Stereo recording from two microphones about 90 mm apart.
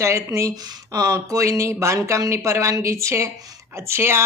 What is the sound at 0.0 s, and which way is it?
Speech, 35° right (ahead or behind).